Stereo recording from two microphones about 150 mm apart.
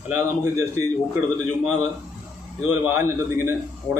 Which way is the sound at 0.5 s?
20° right (ahead or behind).